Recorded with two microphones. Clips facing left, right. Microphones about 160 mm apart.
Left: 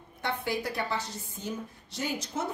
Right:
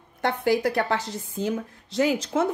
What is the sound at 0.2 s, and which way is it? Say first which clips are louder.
A woman's voice: right 9 dB; 80° right.